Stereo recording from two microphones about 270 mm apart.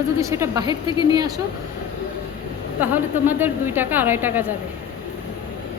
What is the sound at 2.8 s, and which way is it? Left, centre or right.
A woman's voice, centre.